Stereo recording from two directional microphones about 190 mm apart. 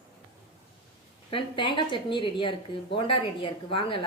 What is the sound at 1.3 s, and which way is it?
A woman's voice, 25° left (ahead or behind).